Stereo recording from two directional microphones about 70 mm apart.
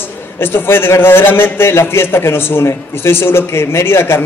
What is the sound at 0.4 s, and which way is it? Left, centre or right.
A man's voice, left.